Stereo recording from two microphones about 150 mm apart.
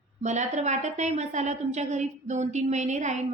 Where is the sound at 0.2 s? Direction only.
50° right (ahead or behind).